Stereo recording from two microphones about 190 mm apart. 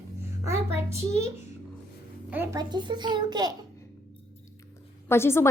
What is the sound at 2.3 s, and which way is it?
A child's voice, 15° right (ahead or behind).